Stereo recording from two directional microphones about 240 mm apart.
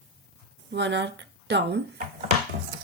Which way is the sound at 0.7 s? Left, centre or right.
Right.